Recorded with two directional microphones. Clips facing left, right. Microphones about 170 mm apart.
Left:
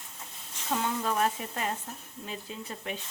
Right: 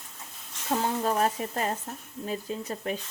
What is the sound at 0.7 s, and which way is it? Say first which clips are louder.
Speech: right 3 dB; 40° right (ahead or behind).